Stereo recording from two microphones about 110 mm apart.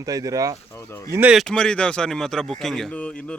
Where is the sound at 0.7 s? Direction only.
25° left (ahead or behind).